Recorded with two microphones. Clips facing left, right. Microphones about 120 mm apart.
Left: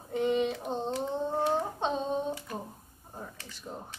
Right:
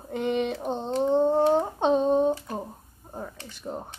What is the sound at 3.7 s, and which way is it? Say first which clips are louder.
Speech: right 7 dB; 60° right (ahead or behind).